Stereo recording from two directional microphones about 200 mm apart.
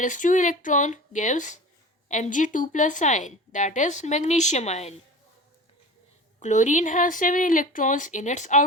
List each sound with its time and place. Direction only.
0.0 s a woman's voice: 40° left (ahead or behind)
6.4 s a woman's voice: 35° left (ahead or behind)